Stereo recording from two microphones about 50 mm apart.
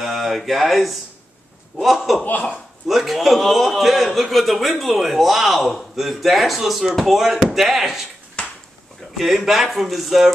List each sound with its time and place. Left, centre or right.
0.0 s a man's voice: centre
8.4 s a sound: centre
9.1 s a man's voice: centre